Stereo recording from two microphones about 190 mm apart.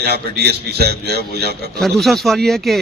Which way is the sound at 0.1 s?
60° right (ahead or behind).